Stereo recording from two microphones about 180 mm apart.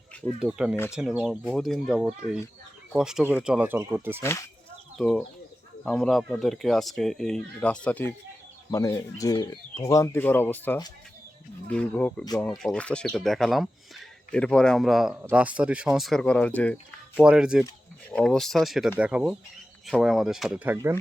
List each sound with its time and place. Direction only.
0.3 s speech: 5° right (ahead or behind)
4.2 s speech: 15° left (ahead or behind)
4.9 s speech: 5° left (ahead or behind)
17.2 s speech: 5° right (ahead or behind)
20.7 s speech: 15° right (ahead or behind)